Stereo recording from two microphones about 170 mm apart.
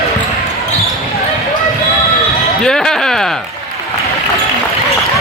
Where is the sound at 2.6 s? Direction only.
5° left (ahead or behind).